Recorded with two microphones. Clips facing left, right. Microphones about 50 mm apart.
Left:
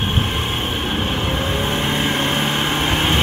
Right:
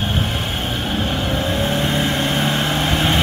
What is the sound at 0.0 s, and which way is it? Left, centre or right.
Vehicle, left.